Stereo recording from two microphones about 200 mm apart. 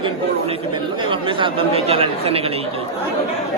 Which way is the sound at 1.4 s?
30° right (ahead or behind).